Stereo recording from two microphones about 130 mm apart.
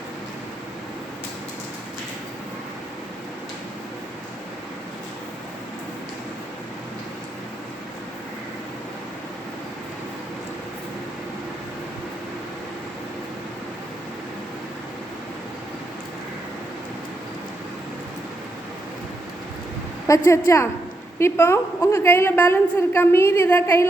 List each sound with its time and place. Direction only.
20.1 s a woman's voice: 25° left (ahead or behind)